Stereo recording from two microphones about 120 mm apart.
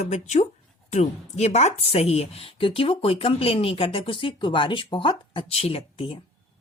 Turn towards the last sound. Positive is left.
turn(degrees=50)  # may be behind; listen again after turning